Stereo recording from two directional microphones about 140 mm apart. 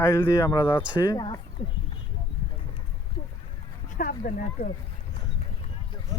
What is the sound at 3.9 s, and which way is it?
Speech, 90° left.